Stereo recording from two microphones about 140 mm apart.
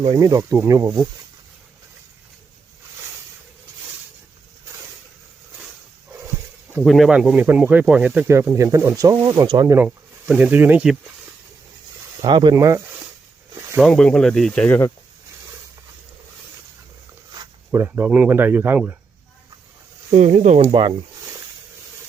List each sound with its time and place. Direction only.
0.0 s speech: 30° right (ahead or behind)
6.8 s speech: centre (ahead or behind); by 9.7 s 30° right (ahead or behind)
9.7 s speech: 10° right (ahead or behind)
12.2 s speech: 30° right (ahead or behind)
13.7 s speech: 5° left (ahead or behind)
17.7 s speech: 15° right (ahead or behind)
20.1 s speech: 50° right (ahead or behind)
20.7 s speech: 35° right (ahead or behind)